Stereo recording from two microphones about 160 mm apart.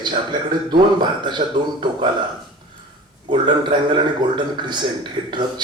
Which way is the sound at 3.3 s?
30° right (ahead or behind).